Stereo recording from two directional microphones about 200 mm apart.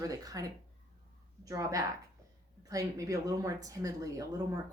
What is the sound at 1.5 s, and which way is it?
Speech, 15° right (ahead or behind).